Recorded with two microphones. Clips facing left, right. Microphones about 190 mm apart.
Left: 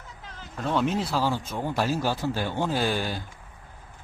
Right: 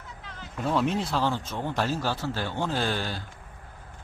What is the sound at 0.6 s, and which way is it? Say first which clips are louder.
Speech: even; centre (ahead or behind).